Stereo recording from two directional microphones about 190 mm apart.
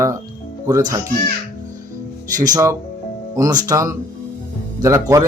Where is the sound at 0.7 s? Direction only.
20° right (ahead or behind).